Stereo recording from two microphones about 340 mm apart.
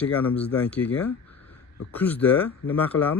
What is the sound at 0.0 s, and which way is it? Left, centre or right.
Speech, centre.